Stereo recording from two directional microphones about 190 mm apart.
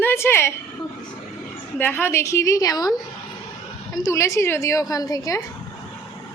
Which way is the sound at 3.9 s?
15° left (ahead or behind).